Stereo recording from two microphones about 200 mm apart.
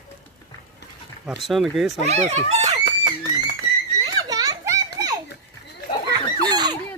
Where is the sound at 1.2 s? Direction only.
Centre (ahead or behind).